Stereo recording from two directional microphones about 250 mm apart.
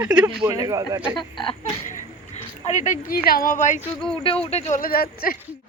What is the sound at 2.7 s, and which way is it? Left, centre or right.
Speech, left.